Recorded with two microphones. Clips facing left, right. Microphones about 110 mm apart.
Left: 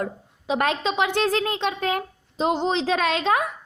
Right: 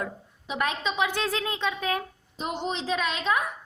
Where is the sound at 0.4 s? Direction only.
90° left; by 1.7 s 65° left (ahead or behind).